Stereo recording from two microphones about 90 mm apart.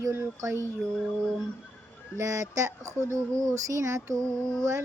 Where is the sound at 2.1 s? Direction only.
35° right (ahead or behind).